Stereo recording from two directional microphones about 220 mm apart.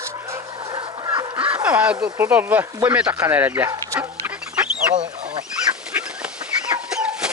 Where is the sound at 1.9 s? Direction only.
15° right (ahead or behind).